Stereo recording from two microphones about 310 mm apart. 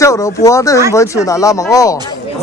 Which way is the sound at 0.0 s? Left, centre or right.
Centre.